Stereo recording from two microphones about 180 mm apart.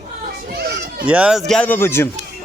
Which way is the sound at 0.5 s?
65° right (ahead or behind).